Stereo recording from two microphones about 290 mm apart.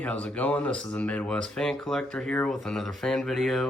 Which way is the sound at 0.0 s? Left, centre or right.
Centre.